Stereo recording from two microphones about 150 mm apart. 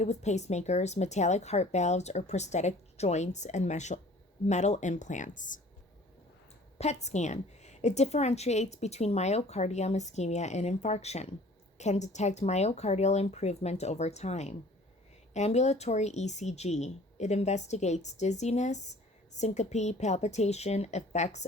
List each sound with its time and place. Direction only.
0.0 s a woman's voice: 50° left (ahead or behind)
6.7 s a woman's voice: 50° left (ahead or behind)